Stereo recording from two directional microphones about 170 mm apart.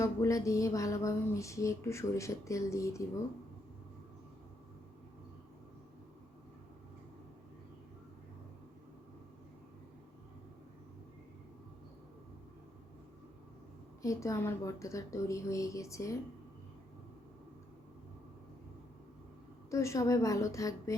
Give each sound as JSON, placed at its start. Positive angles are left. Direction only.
{"t": 0.0, "sound": "speech", "side_deg": 20}
{"t": 14.0, "sound": "a woman's voice", "side_deg": 20}
{"t": 19.7, "sound": "a woman's voice", "side_deg": 15}